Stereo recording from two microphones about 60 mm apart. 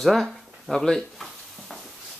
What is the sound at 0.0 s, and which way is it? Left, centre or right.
Speech, centre.